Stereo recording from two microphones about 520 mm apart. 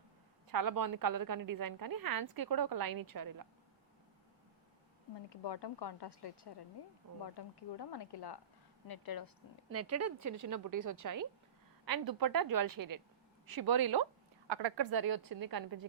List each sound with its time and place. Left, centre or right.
0.5 s a woman's voice: right
5.1 s a woman's voice: left
9.6 s a woman's voice: right